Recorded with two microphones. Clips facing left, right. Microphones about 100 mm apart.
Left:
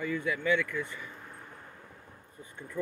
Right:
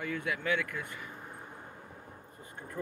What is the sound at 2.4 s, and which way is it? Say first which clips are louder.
Speech: left 1 dB; 45° right (ahead or behind).